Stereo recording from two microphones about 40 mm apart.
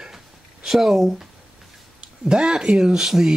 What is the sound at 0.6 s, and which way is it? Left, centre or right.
Speech, centre.